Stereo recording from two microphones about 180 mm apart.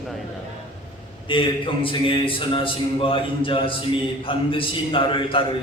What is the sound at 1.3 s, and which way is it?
A man's voice, 30° left (ahead or behind).